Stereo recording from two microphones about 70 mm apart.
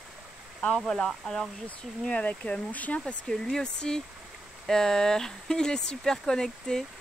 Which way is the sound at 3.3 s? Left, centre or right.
Centre.